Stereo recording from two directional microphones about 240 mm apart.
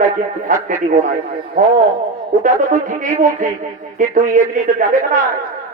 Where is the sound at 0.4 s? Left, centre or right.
Right.